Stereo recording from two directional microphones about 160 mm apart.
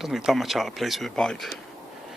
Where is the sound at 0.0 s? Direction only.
Centre (ahead or behind).